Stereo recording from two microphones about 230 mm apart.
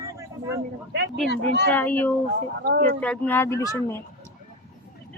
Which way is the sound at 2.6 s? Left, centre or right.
Right.